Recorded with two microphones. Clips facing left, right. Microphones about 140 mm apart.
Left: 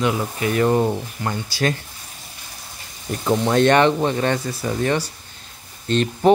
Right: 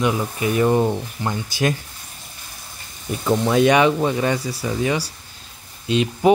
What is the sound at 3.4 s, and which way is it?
Speech, 5° right (ahead or behind).